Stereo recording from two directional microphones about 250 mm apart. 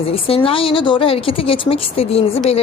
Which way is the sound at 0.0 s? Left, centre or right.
Left.